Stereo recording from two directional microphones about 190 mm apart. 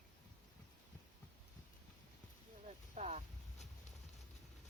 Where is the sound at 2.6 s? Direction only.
40° right (ahead or behind).